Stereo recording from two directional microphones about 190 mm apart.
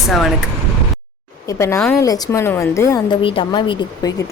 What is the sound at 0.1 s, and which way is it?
Speech, centre (ahead or behind).